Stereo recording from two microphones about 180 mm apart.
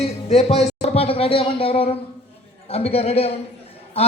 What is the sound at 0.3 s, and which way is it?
Speech, 35° left (ahead or behind).